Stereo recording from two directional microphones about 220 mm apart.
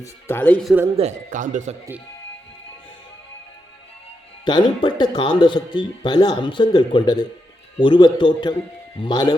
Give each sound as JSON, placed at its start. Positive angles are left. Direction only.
{"t": 0.0, "sound": "speech", "side_deg": 10}
{"t": 0.9, "sound": "speech", "side_deg": -35}
{"t": 4.4, "sound": "speech", "side_deg": 20}